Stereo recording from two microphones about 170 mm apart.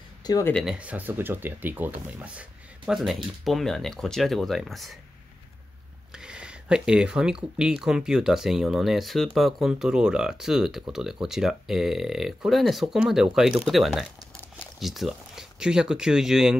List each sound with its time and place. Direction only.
0.2 s a sound: 20° left (ahead or behind)
0.7 s speech: 10° right (ahead or behind)
6.1 s speech: 5° right (ahead or behind)